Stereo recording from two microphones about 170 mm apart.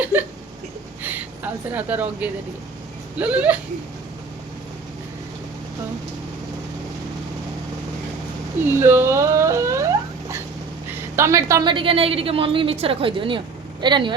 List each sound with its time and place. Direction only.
0.0 s hiccup: 10° right (ahead or behind)
1.7 s a woman's voice: 10° right (ahead or behind)
8.6 s a sound: 15° right (ahead or behind)
11.2 s a woman's voice: 20° right (ahead or behind)
11.7 s a woman's voice: 30° right (ahead or behind)